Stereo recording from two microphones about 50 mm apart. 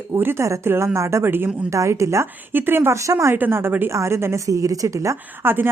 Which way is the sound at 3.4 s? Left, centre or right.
Right.